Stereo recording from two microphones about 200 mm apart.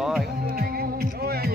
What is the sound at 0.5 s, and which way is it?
Music, 50° right (ahead or behind).